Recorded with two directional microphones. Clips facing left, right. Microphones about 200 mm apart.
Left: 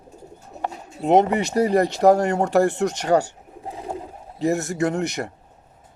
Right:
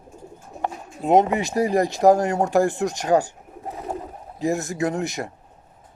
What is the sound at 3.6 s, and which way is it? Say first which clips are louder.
Bird: right 1 dB; 15° left (ahead or behind).